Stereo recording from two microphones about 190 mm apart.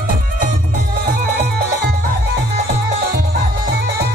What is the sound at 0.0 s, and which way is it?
Music, 45° right (ahead or behind).